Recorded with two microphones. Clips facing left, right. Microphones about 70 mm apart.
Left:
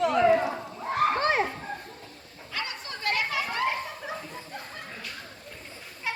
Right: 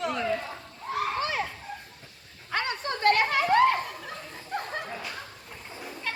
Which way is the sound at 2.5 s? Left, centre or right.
Right.